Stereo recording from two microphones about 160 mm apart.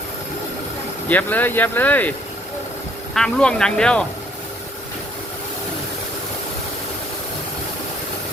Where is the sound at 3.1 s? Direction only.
5° left (ahead or behind).